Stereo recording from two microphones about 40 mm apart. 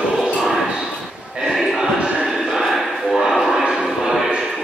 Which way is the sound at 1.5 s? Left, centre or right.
Centre.